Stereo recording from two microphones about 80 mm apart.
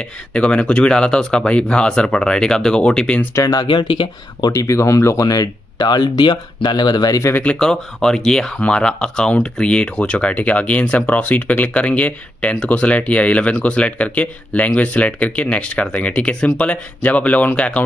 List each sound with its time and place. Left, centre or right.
0.0 s speech: centre
3.5 s speech: left
4.5 s speech: left
7.5 s speech: centre